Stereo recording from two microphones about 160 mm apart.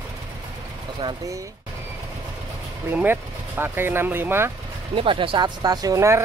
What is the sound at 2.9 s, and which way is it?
Speech, 15° right (ahead or behind).